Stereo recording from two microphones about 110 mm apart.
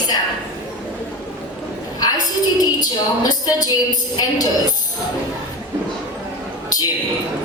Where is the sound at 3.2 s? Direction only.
35° left (ahead or behind).